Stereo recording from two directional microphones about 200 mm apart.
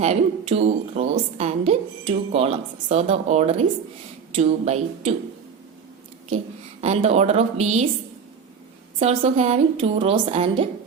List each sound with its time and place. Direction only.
0.0 s a woman's voice: 35° right (ahead or behind)
6.8 s a woman's voice: 35° right (ahead or behind)
9.0 s a woman's voice: 30° right (ahead or behind)